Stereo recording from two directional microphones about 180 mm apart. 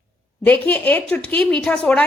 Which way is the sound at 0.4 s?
10° left (ahead or behind).